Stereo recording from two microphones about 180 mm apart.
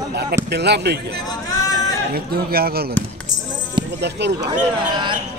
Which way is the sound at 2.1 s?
60° right (ahead or behind).